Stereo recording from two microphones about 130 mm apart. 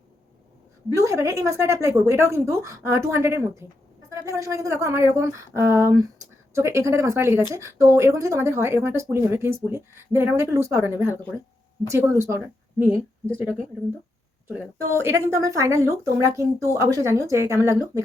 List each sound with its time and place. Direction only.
0.9 s a woman's voice: 25° right (ahead or behind)
14.8 s speech: 20° right (ahead or behind)